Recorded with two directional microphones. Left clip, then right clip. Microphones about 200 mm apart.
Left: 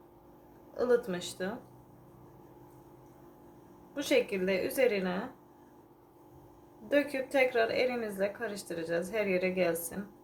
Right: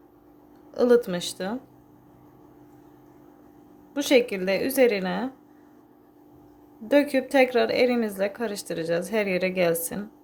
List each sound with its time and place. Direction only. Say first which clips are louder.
0.7 s a woman's voice: right 9 dB; 50° right (ahead or behind)
3.9 s a woman's voice: right 8 dB; 50° right (ahead or behind)
6.8 s a woman's voice: right 8 dB; 50° right (ahead or behind)